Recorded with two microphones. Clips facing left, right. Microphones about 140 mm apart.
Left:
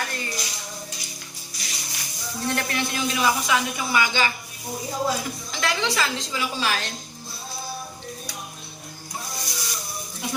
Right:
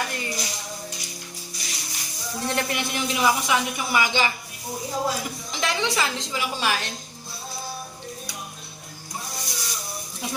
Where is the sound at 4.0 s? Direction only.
20° right (ahead or behind).